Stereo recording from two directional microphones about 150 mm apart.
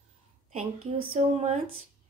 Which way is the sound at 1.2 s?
50° right (ahead or behind).